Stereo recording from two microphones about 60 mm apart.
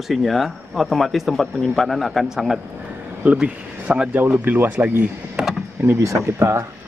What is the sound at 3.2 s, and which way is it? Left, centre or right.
Speech, right.